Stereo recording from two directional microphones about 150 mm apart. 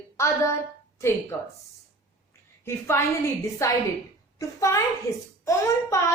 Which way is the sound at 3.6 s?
20° left (ahead or behind).